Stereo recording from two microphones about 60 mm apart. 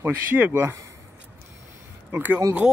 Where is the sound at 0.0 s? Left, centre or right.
Right.